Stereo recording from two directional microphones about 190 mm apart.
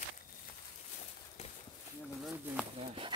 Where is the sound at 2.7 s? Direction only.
30° right (ahead or behind).